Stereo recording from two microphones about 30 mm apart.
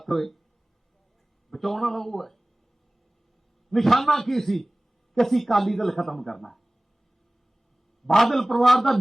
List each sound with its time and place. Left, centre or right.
0.0 s speech: centre
1.5 s a man's voice: centre
3.7 s a man's voice: centre
8.0 s a man's voice: centre